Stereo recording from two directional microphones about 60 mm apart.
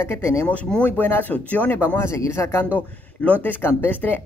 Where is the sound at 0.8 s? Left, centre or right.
Left.